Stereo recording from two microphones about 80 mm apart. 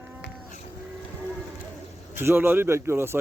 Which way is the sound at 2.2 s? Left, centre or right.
Right.